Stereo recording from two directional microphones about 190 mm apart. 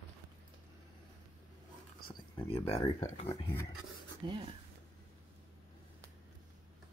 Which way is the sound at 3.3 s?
25° left (ahead or behind).